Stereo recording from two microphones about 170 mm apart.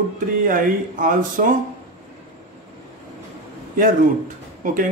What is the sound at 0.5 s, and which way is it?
Speech, 50° right (ahead or behind).